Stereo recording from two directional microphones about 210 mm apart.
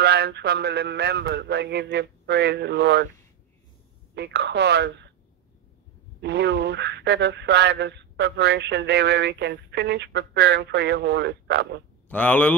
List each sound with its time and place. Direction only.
0.0 s a sound: 50° right (ahead or behind)
4.1 s speech: 55° right (ahead or behind)
6.2 s speech: 55° right (ahead or behind)
12.1 s speech: 10° left (ahead or behind)